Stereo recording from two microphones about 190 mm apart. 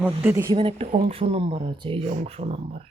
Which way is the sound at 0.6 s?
30° right (ahead or behind).